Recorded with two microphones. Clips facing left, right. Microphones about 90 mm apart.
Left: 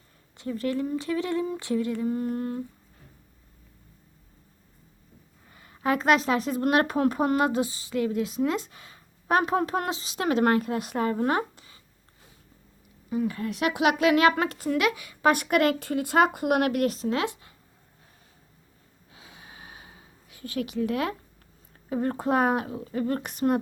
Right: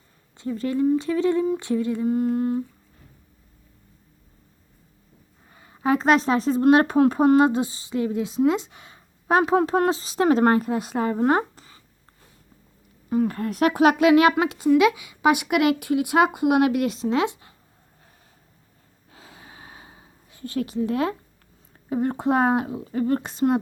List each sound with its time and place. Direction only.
0.3 s speech: 25° right (ahead or behind)
5.5 s speech: 25° right (ahead or behind)
13.1 s speech: 50° right (ahead or behind)
14.0 s a woman's voice: 20° right (ahead or behind)
19.1 s gasp: 35° right (ahead or behind)
21.8 s speech: 25° right (ahead or behind)